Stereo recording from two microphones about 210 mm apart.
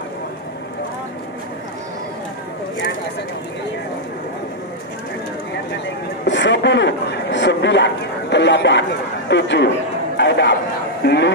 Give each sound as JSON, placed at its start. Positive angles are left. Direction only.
{"t": 6.2, "sound": "a man's voice", "side_deg": 60}
{"t": 10.1, "sound": "chatter", "side_deg": 55}
{"t": 11.1, "sound": "a man's voice", "side_deg": 55}